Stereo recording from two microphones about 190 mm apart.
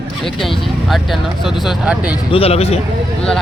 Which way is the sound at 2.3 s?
30° left (ahead or behind).